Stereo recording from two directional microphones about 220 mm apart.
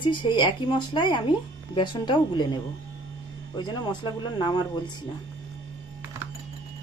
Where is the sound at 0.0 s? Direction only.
20° left (ahead or behind).